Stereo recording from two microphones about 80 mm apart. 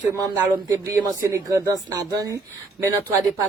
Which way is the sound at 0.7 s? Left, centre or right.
Right.